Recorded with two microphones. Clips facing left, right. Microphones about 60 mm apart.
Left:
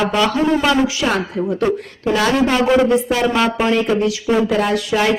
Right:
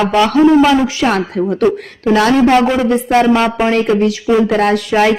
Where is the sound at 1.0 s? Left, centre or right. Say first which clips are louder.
Right 4 dB; centre.